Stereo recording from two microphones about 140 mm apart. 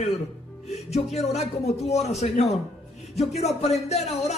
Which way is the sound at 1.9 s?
50° left (ahead or behind).